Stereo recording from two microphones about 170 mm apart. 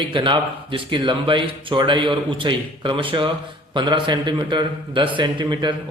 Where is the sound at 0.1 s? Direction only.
30° right (ahead or behind).